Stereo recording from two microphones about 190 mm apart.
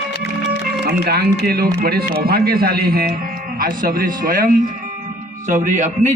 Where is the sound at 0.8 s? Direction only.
55° right (ahead or behind).